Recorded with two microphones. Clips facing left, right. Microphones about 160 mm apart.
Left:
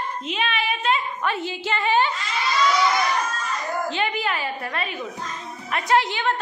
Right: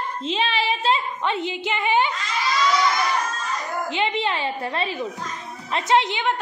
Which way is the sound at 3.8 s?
20° right (ahead or behind).